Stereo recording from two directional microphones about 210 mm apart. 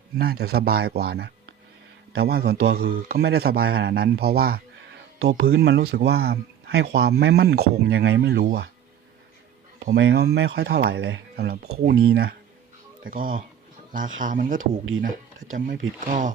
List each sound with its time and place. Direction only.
0.2 s speech: 45° right (ahead or behind)
9.8 s speech: 55° right (ahead or behind); by 16.3 s 35° right (ahead or behind)